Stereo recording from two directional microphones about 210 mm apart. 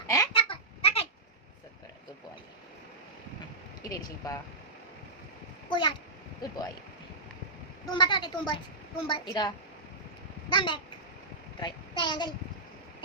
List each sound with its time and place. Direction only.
0.1 s a sound: 20° left (ahead or behind)
3.8 s speech: 15° left (ahead or behind)
5.6 s a child's voice: 25° left (ahead or behind)
7.9 s a woman's voice: 20° left (ahead or behind)
10.5 s a woman's voice: 20° left (ahead or behind)